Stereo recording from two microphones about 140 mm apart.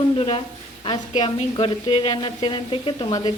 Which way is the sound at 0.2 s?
40° left (ahead or behind).